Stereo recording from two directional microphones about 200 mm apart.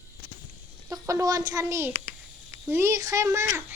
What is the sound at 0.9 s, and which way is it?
A child's voice, 15° right (ahead or behind).